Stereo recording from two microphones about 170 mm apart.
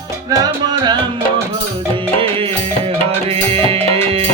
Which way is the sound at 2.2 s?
35° right (ahead or behind).